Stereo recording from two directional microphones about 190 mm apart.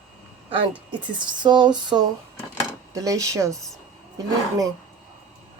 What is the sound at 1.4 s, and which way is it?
A woman's voice, 25° right (ahead or behind).